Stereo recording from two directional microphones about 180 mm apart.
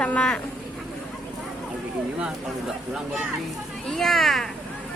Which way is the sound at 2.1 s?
5° right (ahead or behind).